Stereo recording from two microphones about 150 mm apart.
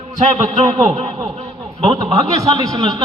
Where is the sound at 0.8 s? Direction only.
40° right (ahead or behind).